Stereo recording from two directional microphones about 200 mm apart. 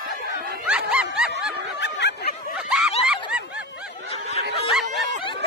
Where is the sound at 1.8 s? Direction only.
60° left (ahead or behind).